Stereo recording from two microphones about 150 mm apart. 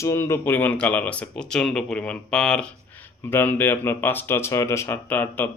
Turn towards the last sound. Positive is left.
turn(degrees=15)  # may be behind; listen again after turning